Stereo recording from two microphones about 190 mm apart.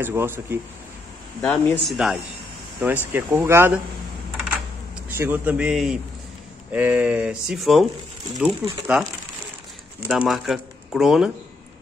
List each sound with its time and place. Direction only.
0.0 s speech: 10° right (ahead or behind)
1.4 s speech: 5° left (ahead or behind); by 3.8 s 10° right (ahead or behind)
5.1 s speech: 10° right (ahead or behind)
10.0 s speech: 5° right (ahead or behind)